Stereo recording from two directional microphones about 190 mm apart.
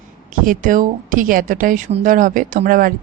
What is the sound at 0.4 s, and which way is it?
Speech, 45° right (ahead or behind).